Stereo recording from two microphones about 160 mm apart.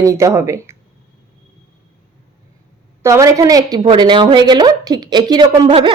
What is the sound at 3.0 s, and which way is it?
A woman's voice, 20° right (ahead or behind).